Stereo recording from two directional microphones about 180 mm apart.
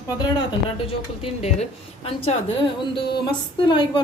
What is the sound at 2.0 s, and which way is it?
Speech, 30° left (ahead or behind).